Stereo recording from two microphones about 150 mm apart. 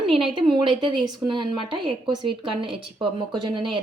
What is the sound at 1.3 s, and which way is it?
Speech, 30° right (ahead or behind).